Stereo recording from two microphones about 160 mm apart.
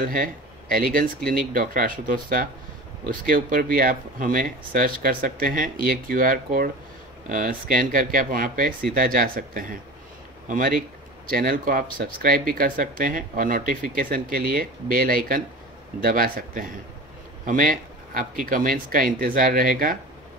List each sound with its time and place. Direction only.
0.0 s speech: 60° right (ahead or behind)